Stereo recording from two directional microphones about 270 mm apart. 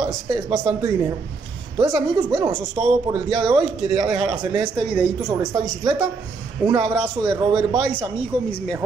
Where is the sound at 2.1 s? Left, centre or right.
Centre.